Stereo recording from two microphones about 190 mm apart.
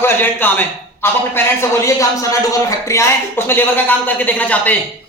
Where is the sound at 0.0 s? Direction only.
10° left (ahead or behind).